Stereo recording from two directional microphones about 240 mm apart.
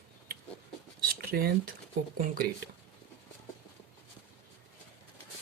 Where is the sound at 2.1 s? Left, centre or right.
Right.